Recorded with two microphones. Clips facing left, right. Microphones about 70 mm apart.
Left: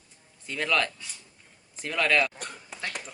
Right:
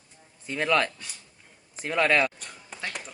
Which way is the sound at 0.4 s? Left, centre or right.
Right.